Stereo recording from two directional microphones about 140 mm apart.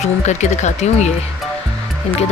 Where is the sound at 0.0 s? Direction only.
55° left (ahead or behind).